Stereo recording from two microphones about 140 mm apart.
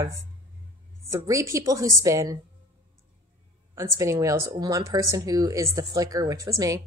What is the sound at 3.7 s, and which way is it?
Speech, 20° right (ahead or behind).